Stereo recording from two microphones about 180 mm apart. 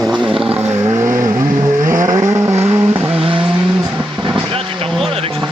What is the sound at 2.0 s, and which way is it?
Vehicle, 20° right (ahead or behind).